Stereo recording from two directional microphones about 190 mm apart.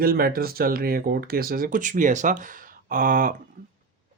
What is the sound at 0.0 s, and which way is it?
Speech, 50° right (ahead or behind).